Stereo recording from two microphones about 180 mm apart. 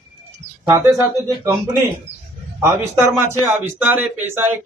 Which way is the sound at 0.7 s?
15° right (ahead or behind).